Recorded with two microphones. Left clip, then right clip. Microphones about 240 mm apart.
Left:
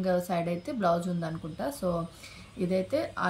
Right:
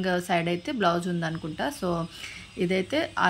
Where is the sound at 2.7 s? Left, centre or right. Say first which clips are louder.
Right 2 dB; centre.